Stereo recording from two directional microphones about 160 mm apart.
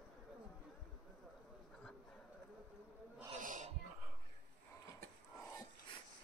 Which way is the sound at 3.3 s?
50° right (ahead or behind).